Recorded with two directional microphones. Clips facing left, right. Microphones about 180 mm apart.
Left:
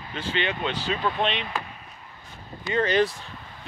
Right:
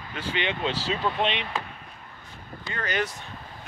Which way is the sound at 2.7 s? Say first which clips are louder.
Left 8 dB; 25° left (ahead or behind).